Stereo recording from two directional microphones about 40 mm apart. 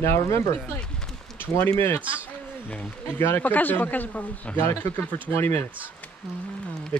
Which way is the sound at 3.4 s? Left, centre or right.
Left.